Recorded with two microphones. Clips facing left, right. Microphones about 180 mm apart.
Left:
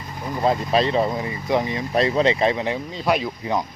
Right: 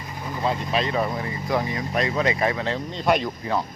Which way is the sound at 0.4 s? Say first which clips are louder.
Left 5 dB; 35° left (ahead or behind).